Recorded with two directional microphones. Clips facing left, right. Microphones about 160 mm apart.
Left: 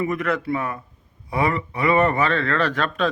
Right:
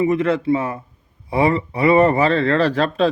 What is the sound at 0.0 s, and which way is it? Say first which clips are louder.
Speech: right 6 dB; 25° right (ahead or behind).